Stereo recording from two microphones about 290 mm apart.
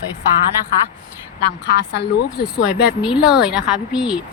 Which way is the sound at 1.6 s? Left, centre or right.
Left.